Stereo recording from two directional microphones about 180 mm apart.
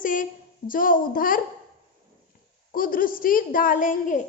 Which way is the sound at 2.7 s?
50° left (ahead or behind).